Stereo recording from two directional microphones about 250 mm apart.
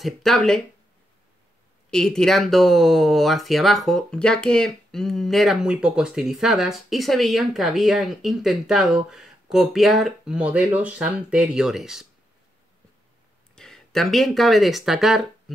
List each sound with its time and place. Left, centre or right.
0.0 s speech: centre
1.9 s speech: centre
13.6 s speech: centre